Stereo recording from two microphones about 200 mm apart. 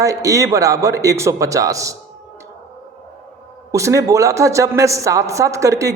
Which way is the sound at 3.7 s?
15° right (ahead or behind).